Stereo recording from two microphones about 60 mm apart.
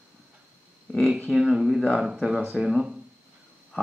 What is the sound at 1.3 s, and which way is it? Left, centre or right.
Speech, centre.